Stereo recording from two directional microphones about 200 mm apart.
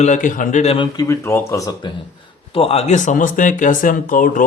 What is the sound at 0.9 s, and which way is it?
Speech, 15° left (ahead or behind).